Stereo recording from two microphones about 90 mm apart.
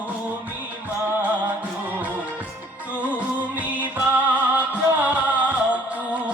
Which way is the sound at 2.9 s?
15° right (ahead or behind).